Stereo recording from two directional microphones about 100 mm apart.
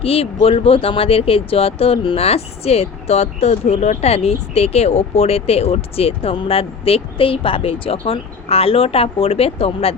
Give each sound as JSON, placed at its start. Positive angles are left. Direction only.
{"t": 0.0, "sound": "speech", "side_deg": 75}